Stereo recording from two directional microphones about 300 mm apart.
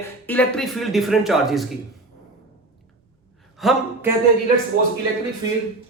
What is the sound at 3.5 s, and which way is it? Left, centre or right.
Speech, centre.